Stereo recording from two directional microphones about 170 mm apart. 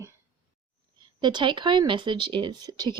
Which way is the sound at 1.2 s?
25° right (ahead or behind).